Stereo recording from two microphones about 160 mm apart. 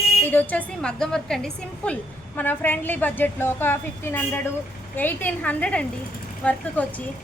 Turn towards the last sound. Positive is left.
turn(degrees=10)  # may be behind; listen again after turning